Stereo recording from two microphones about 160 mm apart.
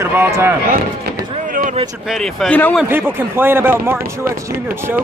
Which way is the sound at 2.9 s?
15° right (ahead or behind).